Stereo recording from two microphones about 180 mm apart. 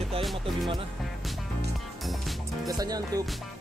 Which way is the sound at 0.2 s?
Centre (ahead or behind).